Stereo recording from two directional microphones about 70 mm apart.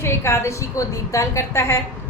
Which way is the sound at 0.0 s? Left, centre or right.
Left.